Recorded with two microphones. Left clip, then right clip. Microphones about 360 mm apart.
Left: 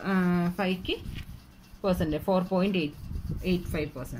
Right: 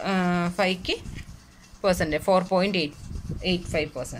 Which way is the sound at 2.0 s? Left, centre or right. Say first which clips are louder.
Right 6 dB; right.